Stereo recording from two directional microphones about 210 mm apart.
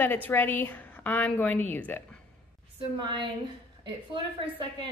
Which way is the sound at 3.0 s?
25° right (ahead or behind).